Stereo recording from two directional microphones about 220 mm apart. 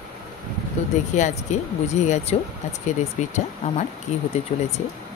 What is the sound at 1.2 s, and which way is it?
Speech, 30° left (ahead or behind).